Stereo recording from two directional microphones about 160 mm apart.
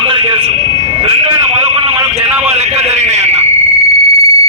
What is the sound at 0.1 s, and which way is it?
Vehicle, 35° right (ahead or behind).